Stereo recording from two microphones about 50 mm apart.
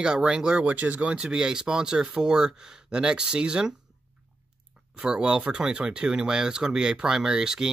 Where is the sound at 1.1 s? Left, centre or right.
Centre.